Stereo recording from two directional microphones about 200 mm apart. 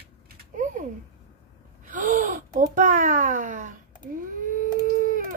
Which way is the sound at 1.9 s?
40° right (ahead or behind).